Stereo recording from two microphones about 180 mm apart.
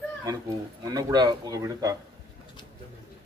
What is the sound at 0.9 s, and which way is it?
Speech, 20° right (ahead or behind).